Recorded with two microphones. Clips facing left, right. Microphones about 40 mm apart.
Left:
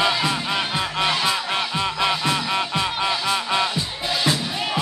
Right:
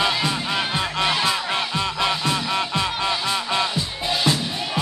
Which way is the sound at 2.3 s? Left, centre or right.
Centre.